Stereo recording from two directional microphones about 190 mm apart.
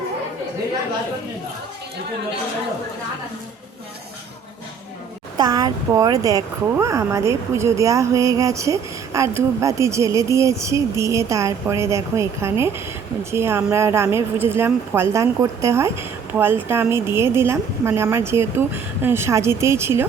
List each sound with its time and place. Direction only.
5.4 s speech: 20° right (ahead or behind)